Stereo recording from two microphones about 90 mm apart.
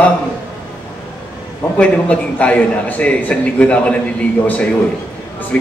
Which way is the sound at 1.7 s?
15° left (ahead or behind).